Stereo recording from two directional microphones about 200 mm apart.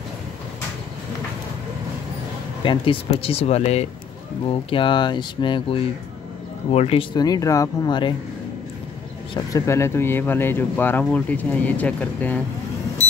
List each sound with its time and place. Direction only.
2.6 s speech: 25° left (ahead or behind)
9.3 s speech: 15° left (ahead or behind)